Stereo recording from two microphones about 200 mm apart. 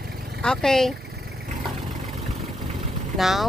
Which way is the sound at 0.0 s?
50° right (ahead or behind).